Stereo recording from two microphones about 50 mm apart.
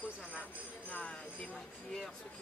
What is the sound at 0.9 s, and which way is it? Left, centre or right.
Speech, left.